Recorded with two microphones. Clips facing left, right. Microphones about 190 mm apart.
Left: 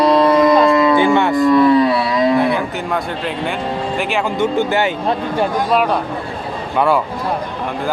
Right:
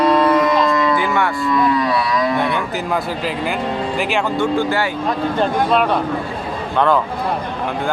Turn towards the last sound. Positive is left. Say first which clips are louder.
# even
turn(degrees=10)  # may be behind; listen again after turning